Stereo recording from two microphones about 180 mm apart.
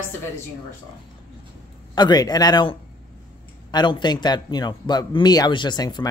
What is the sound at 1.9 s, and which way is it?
A man's voice, 25° left (ahead or behind).